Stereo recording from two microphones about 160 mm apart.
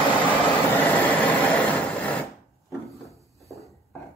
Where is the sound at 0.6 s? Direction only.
10° left (ahead or behind).